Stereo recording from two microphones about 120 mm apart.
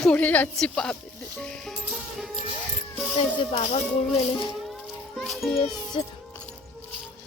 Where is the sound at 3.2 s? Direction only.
50° left (ahead or behind).